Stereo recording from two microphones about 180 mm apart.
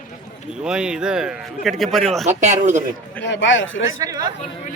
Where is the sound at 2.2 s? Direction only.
40° right (ahead or behind).